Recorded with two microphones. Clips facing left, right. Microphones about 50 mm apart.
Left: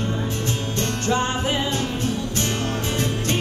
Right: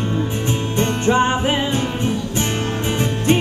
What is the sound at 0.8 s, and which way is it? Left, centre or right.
Music, right.